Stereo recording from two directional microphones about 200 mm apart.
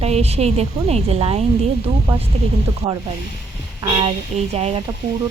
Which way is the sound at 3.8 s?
25° right (ahead or behind).